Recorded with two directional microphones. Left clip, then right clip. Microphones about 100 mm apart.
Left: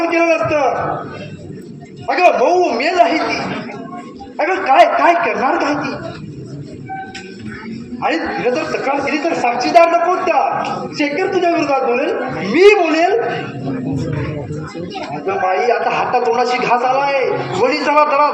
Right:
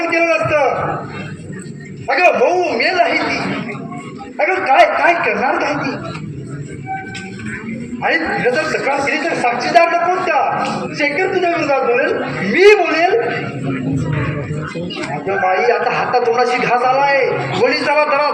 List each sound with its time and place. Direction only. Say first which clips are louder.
0.0 s a sound: left 1 dB; 40° left (ahead or behind)
2.0 s a man's voice: even; 40° left (ahead or behind)
8.0 s a man's voice: right 2 dB; 40° left (ahead or behind)
8.6 s a man's voice: right 1 dB; 20° left (ahead or behind)
9.1 s a man's voice: even; 35° left (ahead or behind)
15.3 s a man's voice: right 1 dB; 40° left (ahead or behind)